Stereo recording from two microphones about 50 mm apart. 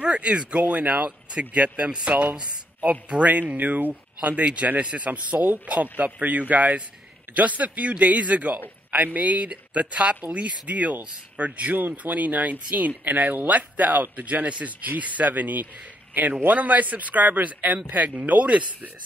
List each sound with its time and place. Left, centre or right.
0.0 s speech: right